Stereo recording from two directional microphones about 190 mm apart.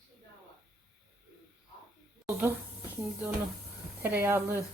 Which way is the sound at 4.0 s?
10° right (ahead or behind).